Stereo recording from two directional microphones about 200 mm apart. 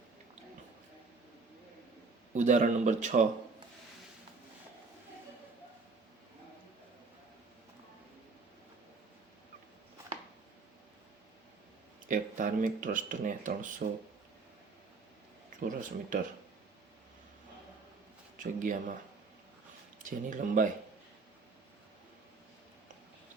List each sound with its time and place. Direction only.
2.3 s speech: 35° right (ahead or behind)
12.0 s speech: 40° right (ahead or behind)
15.6 s speech: 40° right (ahead or behind)
18.3 s speech: 40° right (ahead or behind)
20.0 s speech: 40° right (ahead or behind)